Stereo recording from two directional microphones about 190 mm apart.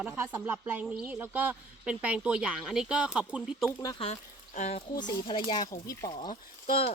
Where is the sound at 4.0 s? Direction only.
35° left (ahead or behind).